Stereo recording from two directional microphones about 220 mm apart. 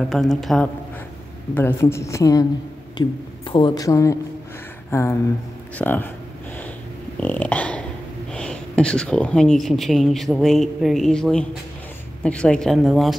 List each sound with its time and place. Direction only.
0.1 s a woman's voice: centre (ahead or behind)
7.2 s dog: 5° left (ahead or behind)
8.3 s speech: 5° left (ahead or behind)